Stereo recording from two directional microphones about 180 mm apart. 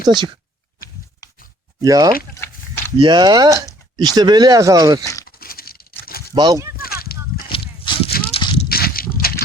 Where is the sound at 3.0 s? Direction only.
25° right (ahead or behind).